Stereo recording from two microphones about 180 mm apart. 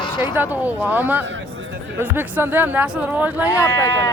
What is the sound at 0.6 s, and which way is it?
Speech, 10° right (ahead or behind).